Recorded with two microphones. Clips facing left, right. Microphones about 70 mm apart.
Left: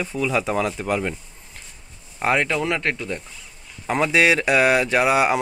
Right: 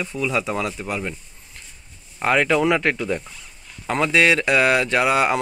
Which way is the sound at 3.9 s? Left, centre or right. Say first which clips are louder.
Even; centre.